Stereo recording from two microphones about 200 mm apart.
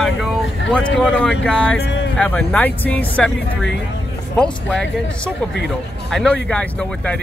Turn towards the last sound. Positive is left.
turn(degrees=5)  # may be behind; listen again after turning